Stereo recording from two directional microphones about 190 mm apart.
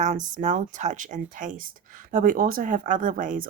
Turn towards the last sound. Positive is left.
turn(degrees=-45)  # may be behind; listen again after turning